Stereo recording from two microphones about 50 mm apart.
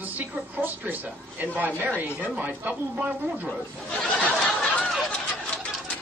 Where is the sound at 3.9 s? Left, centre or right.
Left.